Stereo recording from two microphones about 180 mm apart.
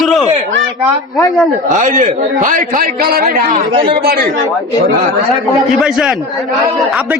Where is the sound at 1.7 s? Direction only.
45° right (ahead or behind).